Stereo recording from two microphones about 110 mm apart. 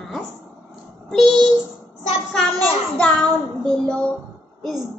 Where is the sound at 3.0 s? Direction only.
10° left (ahead or behind).